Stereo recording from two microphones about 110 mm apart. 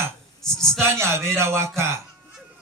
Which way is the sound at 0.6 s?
25° right (ahead or behind).